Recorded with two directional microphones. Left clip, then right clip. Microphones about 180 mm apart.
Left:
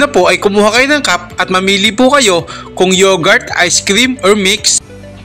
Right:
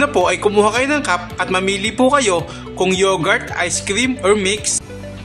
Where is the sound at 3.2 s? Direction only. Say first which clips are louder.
Left 8 dB; 30° left (ahead or behind).